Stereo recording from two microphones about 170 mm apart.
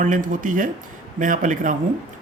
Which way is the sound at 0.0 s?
50° right (ahead or behind).